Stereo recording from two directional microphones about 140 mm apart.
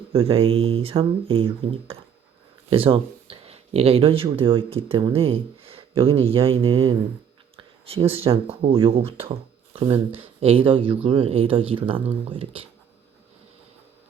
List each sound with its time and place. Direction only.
0.1 s speech: 40° right (ahead or behind)